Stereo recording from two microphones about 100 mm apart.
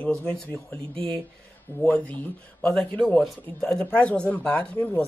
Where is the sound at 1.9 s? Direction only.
15° left (ahead or behind).